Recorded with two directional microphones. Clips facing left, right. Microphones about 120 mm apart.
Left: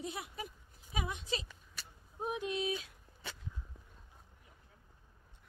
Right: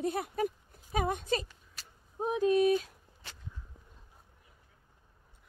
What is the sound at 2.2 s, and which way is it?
Speech, 40° right (ahead or behind).